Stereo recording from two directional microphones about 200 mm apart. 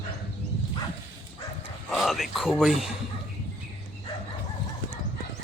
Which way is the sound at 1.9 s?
Centre (ahead or behind).